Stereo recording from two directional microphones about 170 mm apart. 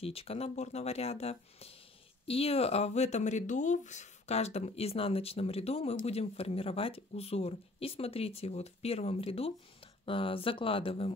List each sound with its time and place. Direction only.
0.0 s speech: 35° left (ahead or behind)